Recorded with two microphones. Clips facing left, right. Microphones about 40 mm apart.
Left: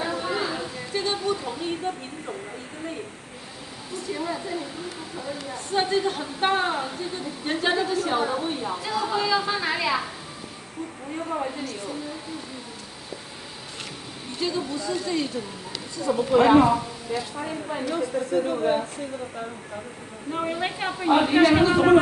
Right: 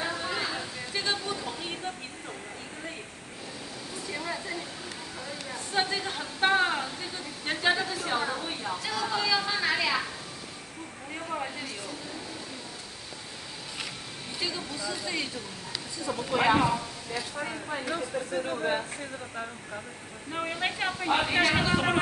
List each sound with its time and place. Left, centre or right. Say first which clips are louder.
0.0 s a sound: left 4 dB; centre
4.1 s a woman's voice: left 5 dB; centre
11.2 s a woman's voice: left 5 dB; centre
14.4 s a woman's voice: left 7 dB; centre
16.0 s a woman's voice: left 8 dB; centre
17.4 s a woman's voice: left 4 dB; centre
20.2 s a woman's voice: left 4 dB; centre